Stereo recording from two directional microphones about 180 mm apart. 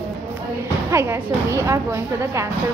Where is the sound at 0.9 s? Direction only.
15° right (ahead or behind).